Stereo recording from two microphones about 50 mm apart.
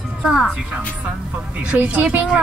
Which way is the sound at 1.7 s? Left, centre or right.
Right.